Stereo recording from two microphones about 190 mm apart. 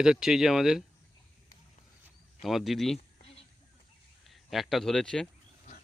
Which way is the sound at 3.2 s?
30° left (ahead or behind).